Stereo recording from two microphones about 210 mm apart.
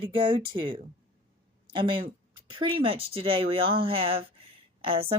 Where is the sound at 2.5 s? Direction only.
25° right (ahead or behind).